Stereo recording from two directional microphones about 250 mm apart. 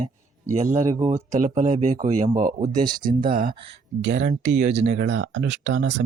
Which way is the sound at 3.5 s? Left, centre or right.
Right.